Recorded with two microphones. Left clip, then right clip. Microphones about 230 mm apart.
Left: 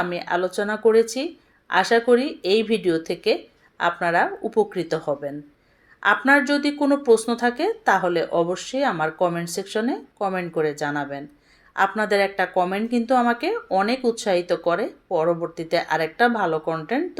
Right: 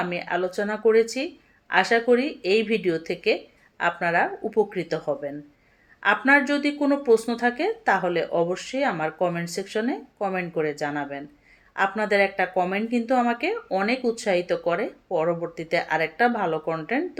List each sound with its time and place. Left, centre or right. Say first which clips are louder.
0.0 s speech: left 2 dB; centre
0.6 s speech: left 2 dB; left
0.9 s speech: left 2 dB; centre